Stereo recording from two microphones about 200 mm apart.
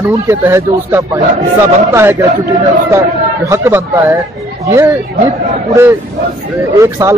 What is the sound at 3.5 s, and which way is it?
A man's voice, 15° right (ahead or behind).